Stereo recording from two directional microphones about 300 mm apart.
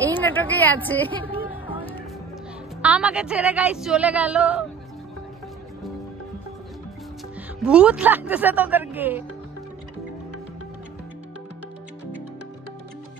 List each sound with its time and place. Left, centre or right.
0.0 s a woman's voice: centre
2.8 s music: centre
7.6 s music: centre